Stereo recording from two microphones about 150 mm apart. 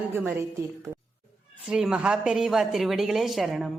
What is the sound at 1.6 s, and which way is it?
A woman's voice, 5° right (ahead or behind).